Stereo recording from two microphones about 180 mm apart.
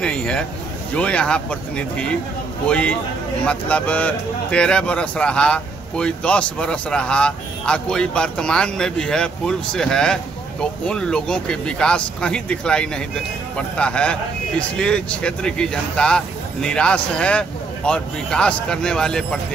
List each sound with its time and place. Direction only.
0.0 s speech: 5° left (ahead or behind)